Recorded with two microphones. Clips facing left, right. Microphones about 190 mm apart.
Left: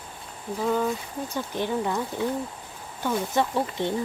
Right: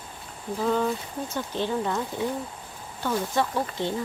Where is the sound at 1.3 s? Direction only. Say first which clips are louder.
Even; 15° left (ahead or behind).